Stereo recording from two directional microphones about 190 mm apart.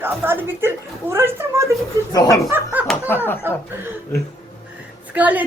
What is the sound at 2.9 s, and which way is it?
Speech, 10° left (ahead or behind).